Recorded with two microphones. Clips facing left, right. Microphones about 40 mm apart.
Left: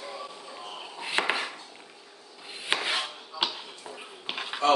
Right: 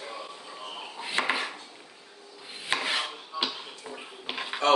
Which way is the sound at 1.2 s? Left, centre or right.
Left.